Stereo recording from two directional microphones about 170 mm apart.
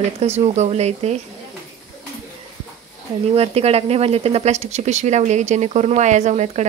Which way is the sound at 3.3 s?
35° right (ahead or behind).